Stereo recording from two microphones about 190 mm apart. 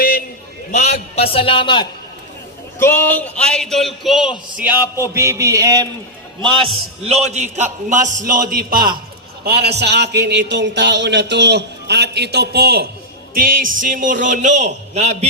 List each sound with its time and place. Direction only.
0.7 s a man's voice: 35° left (ahead or behind)
2.7 s a man's voice: 15° left (ahead or behind); by 15.3 s 35° right (ahead or behind)